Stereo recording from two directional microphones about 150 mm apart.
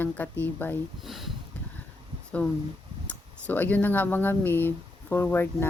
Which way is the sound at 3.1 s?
10° left (ahead or behind).